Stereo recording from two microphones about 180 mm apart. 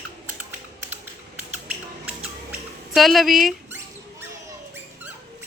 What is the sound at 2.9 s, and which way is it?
Speech, centre (ahead or behind).